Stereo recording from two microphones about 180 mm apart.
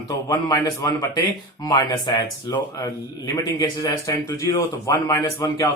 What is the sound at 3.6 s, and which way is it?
A man's voice, 15° left (ahead or behind).